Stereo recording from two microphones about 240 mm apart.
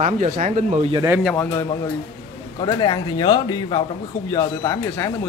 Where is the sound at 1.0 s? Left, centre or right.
Centre.